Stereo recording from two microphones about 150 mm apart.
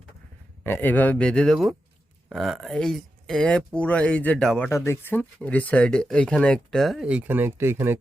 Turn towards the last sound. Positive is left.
turn(degrees=-15)  # may be behind; listen again after turning